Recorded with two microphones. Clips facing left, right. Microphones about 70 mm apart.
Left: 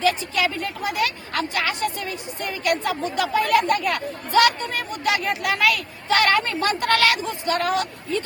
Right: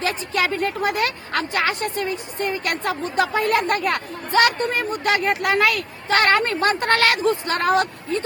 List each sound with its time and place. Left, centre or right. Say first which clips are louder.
0.0 s speech: left 1 dB; right